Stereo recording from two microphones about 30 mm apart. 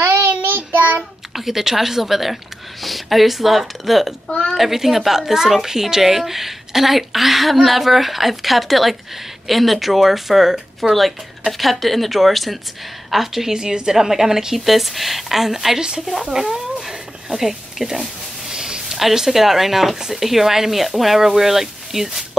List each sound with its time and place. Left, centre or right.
0.5 s child singing: right
1.3 s a woman's voice: centre
16.3 s a sound: centre
19.1 s a woman's voice: centre